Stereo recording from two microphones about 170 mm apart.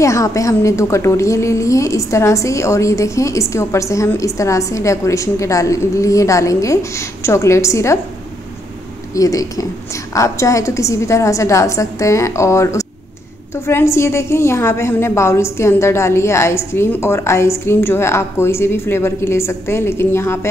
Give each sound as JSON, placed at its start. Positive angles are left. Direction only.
{"t": 0.0, "sound": "a woman's voice", "side_deg": 20}
{"t": 9.1, "sound": "a woman's voice", "side_deg": 20}